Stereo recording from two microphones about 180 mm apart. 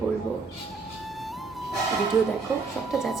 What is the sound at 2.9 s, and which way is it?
Speech, centre (ahead or behind).